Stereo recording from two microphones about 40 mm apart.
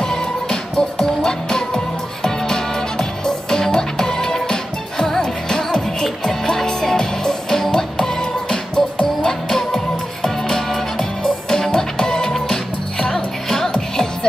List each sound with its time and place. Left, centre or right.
0.0 s music: centre